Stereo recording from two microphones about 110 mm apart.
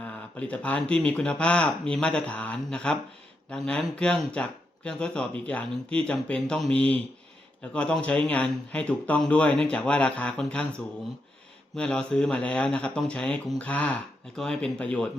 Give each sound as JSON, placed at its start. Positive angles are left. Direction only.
{"t": 0.0, "sound": "speech", "side_deg": 15}
{"t": 11.8, "sound": "speech", "side_deg": 10}